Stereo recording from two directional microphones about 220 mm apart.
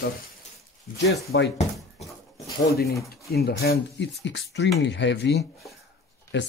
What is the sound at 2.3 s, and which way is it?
Pigeon, 15° left (ahead or behind).